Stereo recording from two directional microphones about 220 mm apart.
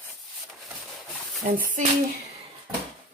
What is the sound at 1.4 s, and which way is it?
Speech, 35° right (ahead or behind).